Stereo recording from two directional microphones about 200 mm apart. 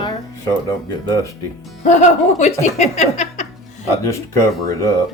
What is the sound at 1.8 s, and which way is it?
Speech, 35° left (ahead or behind).